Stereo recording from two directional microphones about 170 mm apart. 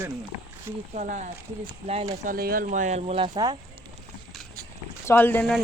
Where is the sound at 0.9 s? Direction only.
45° right (ahead or behind).